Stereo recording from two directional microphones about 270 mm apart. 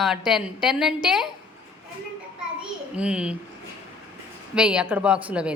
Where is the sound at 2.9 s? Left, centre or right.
Centre.